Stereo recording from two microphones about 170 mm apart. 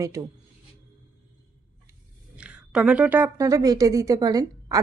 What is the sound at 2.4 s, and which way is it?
Speech, 5° right (ahead or behind).